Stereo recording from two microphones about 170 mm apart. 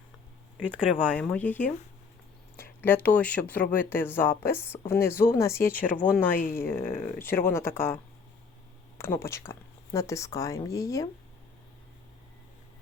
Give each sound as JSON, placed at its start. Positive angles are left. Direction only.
{"t": 0.9, "sound": "speech", "side_deg": 5}
{"t": 9.0, "sound": "speech", "side_deg": 15}